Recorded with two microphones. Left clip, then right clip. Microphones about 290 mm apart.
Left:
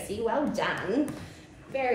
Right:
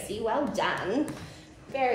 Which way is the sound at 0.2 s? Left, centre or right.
Centre.